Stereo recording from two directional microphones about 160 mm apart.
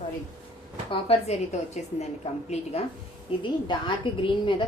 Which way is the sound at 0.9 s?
35° left (ahead or behind).